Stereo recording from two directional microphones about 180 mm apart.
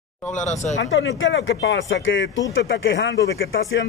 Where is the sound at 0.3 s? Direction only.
40° left (ahead or behind).